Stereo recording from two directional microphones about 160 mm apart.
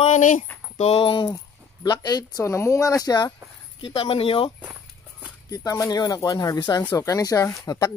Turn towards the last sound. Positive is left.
turn(degrees=20)  # may be behind; listen again after turning